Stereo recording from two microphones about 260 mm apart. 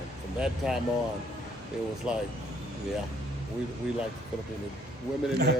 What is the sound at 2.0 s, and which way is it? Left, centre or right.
Speech, centre.